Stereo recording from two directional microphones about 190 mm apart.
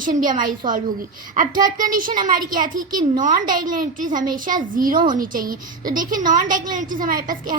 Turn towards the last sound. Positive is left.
turn(degrees=-45)  # may be behind; listen again after turning